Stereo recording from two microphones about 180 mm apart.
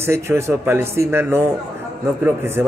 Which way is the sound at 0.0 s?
15° right (ahead or behind).